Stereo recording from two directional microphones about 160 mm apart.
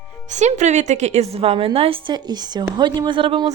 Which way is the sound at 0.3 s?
50° right (ahead or behind).